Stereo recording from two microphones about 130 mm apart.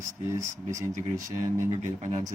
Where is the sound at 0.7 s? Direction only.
70° right (ahead or behind).